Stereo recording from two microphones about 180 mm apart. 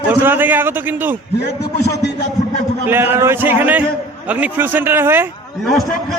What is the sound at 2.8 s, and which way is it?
A man's voice, 10° right (ahead or behind).